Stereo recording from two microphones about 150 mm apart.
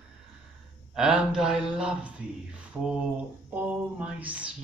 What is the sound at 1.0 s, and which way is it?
Speech, 5° right (ahead or behind).